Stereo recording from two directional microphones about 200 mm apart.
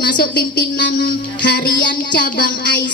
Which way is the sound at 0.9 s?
45° left (ahead or behind).